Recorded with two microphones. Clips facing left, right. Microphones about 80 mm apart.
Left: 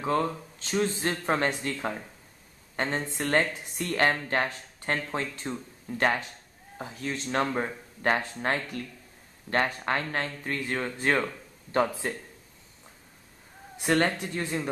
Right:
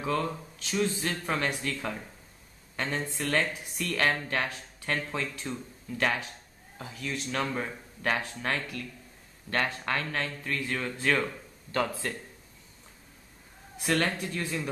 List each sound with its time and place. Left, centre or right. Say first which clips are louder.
0.0 s speech: left 3 dB; left
3.2 s speech: left 4 dB; left
9.9 s speech: left 2 dB; left
13.8 s speech: left 3 dB; left